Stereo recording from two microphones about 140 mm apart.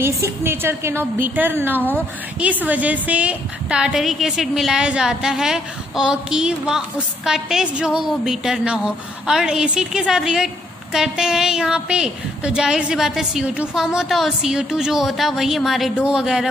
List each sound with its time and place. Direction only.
0.0 s a woman's voice: 20° right (ahead or behind)